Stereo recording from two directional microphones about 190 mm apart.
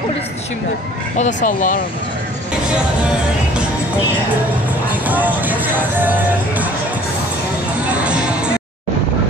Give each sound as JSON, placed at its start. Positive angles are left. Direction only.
{"t": 1.1, "sound": "speech", "side_deg": 40}
{"t": 4.8, "sound": "speech", "side_deg": -10}
{"t": 8.0, "sound": "music", "side_deg": -5}